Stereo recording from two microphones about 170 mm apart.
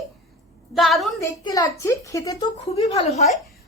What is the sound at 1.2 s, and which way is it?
A woman's voice, 20° left (ahead or behind).